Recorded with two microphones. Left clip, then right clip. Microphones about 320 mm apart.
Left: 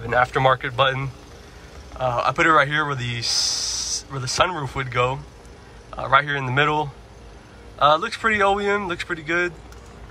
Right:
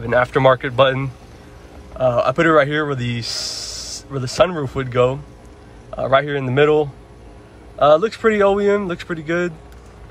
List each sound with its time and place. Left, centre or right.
0.0 s speech: centre